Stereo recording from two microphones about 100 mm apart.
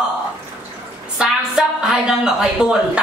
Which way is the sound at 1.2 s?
5° right (ahead or behind).